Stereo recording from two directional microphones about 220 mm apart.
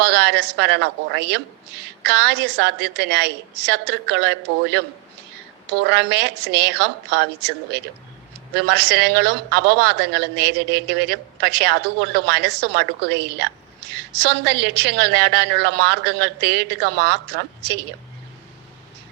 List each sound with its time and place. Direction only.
0.0 s a woman's voice: 50° right (ahead or behind)